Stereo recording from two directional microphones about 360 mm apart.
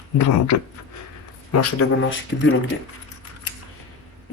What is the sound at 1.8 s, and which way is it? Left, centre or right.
Speech, left.